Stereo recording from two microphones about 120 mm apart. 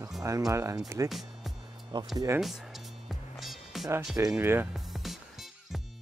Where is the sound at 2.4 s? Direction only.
Centre (ahead or behind).